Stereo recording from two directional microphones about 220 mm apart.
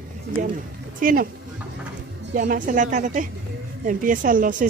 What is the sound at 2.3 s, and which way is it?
Speech, 35° right (ahead or behind).